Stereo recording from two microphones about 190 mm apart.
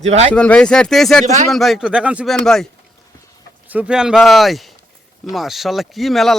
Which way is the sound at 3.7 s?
5° right (ahead or behind).